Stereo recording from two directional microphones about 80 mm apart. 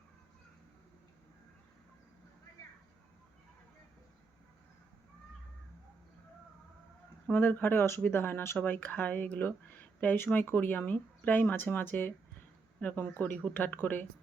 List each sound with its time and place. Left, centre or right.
7.3 s speech: left